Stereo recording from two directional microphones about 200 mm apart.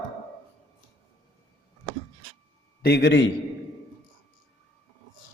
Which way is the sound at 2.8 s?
55° left (ahead or behind).